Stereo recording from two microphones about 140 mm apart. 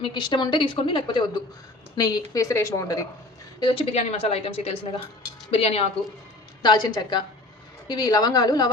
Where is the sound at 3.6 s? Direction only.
35° left (ahead or behind).